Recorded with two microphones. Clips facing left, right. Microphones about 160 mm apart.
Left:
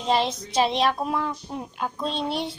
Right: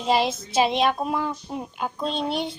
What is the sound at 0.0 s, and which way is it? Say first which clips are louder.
Speech: right 1 dB; 5° right (ahead or behind).